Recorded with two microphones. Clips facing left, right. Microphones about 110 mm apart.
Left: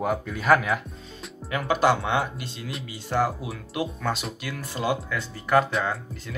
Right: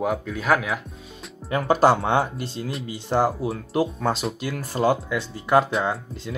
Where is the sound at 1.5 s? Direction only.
35° right (ahead or behind).